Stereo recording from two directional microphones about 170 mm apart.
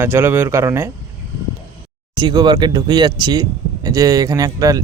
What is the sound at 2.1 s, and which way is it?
Speech, 25° right (ahead or behind).